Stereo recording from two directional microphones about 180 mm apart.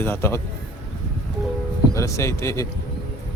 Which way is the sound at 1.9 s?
15° left (ahead or behind).